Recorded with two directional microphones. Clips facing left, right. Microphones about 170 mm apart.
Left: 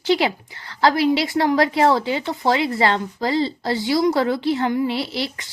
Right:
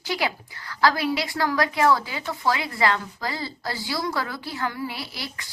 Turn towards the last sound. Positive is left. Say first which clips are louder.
# left 10 dB
turn(degrees=25)  # may be behind; listen again after turning